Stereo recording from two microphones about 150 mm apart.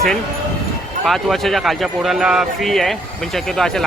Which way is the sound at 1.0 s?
Centre (ahead or behind).